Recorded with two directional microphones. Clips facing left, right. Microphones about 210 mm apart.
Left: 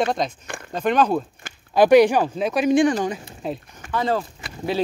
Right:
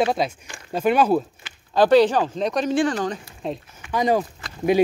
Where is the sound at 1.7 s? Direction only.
15° left (ahead or behind).